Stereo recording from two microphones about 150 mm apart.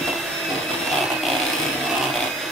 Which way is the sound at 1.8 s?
Centre (ahead or behind).